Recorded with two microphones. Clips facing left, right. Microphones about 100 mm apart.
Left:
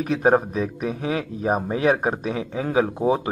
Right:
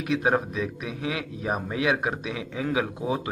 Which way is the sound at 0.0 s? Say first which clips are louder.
Left 5 dB; 40° left (ahead or behind).